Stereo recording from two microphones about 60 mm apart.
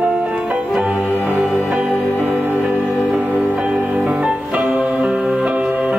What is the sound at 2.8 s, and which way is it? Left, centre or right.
Music, centre.